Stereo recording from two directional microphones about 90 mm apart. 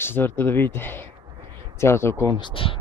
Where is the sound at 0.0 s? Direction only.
25° left (ahead or behind).